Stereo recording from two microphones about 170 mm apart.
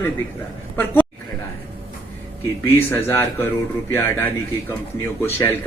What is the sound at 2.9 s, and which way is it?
Speech, 10° left (ahead or behind).